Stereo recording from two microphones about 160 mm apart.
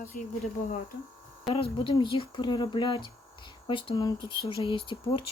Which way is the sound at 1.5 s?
35° left (ahead or behind).